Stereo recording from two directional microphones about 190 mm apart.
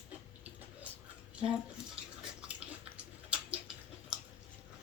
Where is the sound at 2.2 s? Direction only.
5° right (ahead or behind).